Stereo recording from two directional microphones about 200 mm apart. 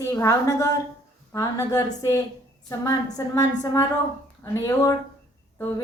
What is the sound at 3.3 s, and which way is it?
A woman's voice, 15° left (ahead or behind).